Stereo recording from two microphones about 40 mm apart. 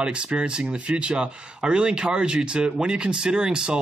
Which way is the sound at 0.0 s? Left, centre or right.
Right.